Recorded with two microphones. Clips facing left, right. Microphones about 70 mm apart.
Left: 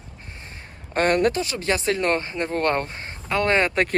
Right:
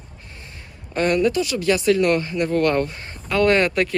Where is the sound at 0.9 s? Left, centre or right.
Left.